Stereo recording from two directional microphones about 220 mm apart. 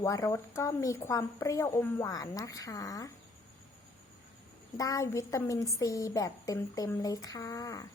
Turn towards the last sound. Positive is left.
turn(degrees=15)  # may be behind; listen again after turning